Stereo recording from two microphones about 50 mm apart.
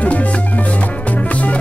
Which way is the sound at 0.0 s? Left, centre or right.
Left.